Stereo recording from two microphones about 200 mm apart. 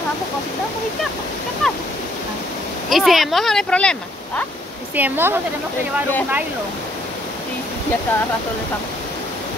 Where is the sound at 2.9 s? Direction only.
Centre (ahead or behind).